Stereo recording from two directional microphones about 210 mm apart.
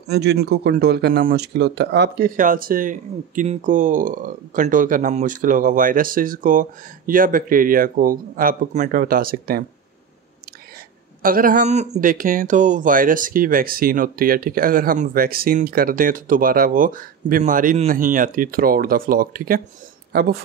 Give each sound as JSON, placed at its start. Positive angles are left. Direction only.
{"t": 0.1, "sound": "speech", "side_deg": -50}
{"t": 11.2, "sound": "speech", "side_deg": -40}